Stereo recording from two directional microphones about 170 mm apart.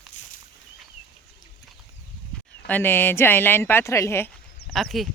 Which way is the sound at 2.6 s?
10° left (ahead or behind).